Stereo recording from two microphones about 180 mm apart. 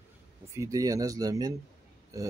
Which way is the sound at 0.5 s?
20° right (ahead or behind).